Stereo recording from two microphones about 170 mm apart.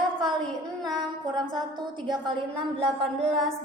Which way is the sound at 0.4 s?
Centre (ahead or behind).